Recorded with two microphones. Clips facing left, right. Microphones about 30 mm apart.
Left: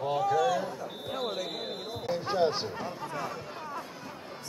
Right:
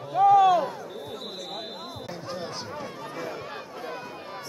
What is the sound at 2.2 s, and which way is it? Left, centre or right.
Speech, left.